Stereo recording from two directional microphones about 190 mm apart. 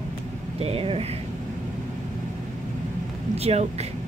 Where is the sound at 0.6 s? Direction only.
30° right (ahead or behind).